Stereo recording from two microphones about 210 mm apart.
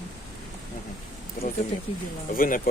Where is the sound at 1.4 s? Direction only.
45° left (ahead or behind).